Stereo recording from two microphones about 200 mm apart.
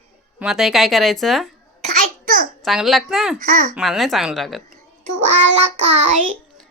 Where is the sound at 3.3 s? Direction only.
40° right (ahead or behind).